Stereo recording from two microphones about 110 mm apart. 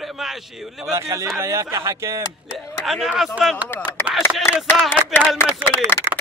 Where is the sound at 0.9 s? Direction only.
25° right (ahead or behind).